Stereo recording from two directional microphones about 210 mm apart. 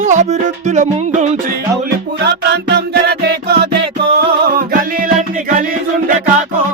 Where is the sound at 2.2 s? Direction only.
55° right (ahead or behind).